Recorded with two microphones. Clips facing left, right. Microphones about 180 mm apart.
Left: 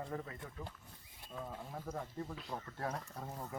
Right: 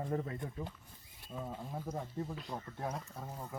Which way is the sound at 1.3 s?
10° right (ahead or behind).